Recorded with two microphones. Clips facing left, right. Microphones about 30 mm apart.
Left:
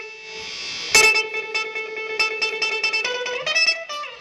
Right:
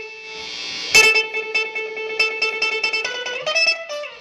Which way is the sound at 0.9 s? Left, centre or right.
Centre.